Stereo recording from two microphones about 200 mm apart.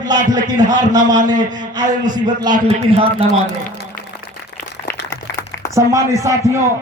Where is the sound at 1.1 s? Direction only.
40° right (ahead or behind).